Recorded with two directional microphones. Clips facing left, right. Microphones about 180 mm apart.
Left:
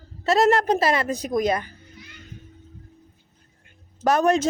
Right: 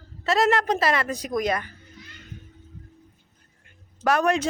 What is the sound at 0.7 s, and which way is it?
Speech, 25° left (ahead or behind).